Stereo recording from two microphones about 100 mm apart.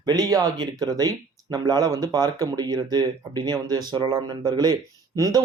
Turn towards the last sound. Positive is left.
turn(degrees=-40)  # may be behind; listen again after turning